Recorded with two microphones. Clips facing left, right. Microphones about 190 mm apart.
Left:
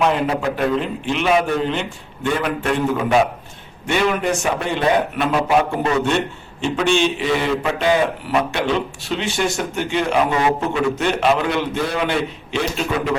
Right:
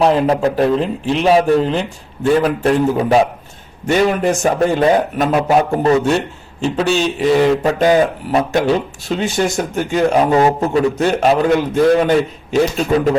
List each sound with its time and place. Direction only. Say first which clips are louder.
0.0 s a man's voice: right 5 dB; 35° right (ahead or behind)